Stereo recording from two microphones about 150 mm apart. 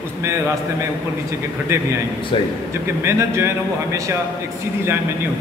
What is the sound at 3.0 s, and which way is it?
Speech, 15° right (ahead or behind).